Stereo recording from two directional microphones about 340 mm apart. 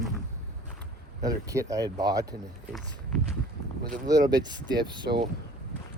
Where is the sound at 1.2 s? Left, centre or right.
Centre.